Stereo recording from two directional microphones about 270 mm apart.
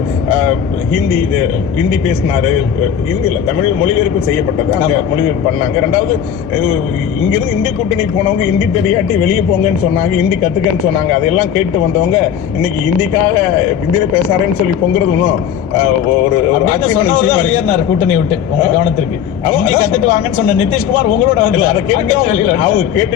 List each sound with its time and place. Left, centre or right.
1.8 s a man's voice: centre
3.8 s a man's voice: centre
7.2 s a man's voice: centre
10.1 s a man's voice: centre
16.6 s a man's voice: centre
19.5 s a man's voice: centre